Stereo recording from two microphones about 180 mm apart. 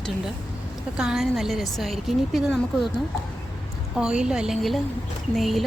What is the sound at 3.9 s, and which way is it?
A woman's voice, 5° right (ahead or behind).